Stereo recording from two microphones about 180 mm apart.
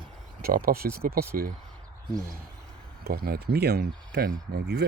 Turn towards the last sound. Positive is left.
turn(degrees=-70)  # may be behind; listen again after turning